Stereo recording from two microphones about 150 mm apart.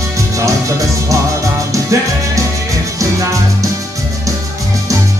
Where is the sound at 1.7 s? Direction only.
20° right (ahead or behind).